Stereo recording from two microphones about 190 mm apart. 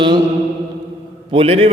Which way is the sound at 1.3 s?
30° right (ahead or behind).